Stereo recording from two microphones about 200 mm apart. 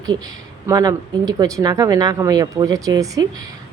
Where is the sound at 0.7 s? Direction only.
15° right (ahead or behind).